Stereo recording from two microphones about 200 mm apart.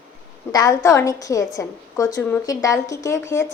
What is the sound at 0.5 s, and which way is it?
Speech, 20° left (ahead or behind).